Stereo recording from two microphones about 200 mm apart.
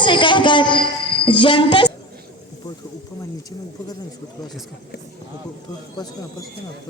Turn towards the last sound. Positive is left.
turn(degrees=20)  # may be behind; listen again after turning